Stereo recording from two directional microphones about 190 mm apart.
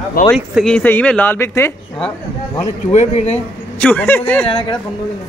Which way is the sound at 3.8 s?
5° left (ahead or behind).